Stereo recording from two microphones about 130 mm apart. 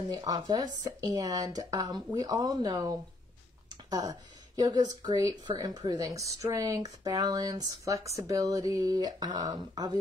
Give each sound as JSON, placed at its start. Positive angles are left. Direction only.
{"t": 0.1, "sound": "speech", "side_deg": -30}